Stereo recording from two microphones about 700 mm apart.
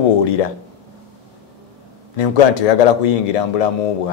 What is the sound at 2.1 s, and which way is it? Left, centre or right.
A man's voice, left.